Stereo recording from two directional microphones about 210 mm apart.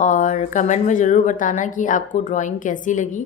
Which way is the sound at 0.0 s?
35° left (ahead or behind).